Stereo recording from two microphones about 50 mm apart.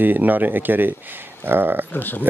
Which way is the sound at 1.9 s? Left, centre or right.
Left.